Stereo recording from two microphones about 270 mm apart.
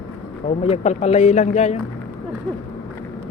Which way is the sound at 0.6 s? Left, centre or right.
Left.